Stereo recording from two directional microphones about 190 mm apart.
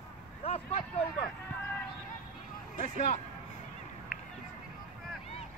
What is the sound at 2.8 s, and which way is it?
Speech, 40° left (ahead or behind).